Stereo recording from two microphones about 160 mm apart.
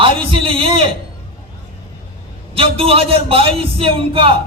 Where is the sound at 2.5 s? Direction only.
35° right (ahead or behind).